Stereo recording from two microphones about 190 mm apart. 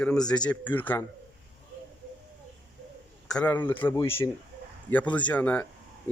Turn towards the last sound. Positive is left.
turn(degrees=5)  # may be behind; listen again after turning